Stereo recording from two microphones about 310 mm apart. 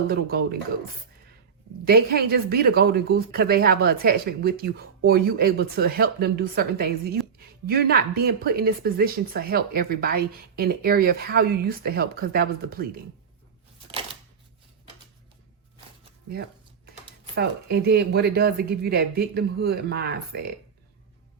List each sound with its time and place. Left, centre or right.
0.1 s speech: right
1.8 s speech: right
17.3 s speech: right